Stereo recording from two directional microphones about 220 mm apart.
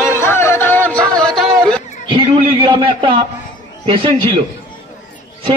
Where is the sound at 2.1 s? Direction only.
25° right (ahead or behind).